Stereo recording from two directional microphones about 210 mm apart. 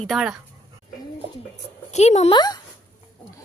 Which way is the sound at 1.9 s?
30° left (ahead or behind).